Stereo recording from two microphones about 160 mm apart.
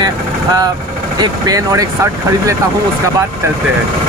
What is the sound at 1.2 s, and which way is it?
Speech, 20° right (ahead or behind).